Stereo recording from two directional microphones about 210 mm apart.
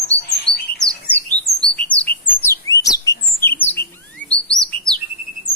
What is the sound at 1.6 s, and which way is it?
Bird, 5° left (ahead or behind).